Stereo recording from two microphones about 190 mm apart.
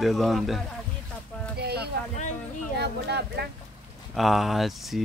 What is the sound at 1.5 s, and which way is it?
Speech, 60° right (ahead or behind).